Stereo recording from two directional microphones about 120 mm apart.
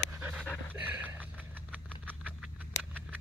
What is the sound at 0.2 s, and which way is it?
Pant, 15° right (ahead or behind).